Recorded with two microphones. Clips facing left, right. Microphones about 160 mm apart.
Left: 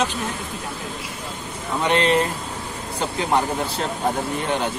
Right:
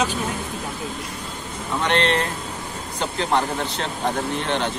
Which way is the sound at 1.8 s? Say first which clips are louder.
Left 2 dB; 5° left (ahead or behind).